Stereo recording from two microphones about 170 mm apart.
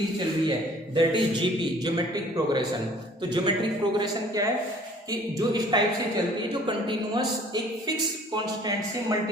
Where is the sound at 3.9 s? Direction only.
25° right (ahead or behind).